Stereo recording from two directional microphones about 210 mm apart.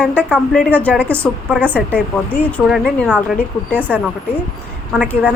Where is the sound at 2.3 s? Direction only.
5° left (ahead or behind).